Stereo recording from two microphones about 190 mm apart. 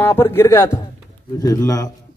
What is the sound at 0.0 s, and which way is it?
A man's voice, 10° left (ahead or behind).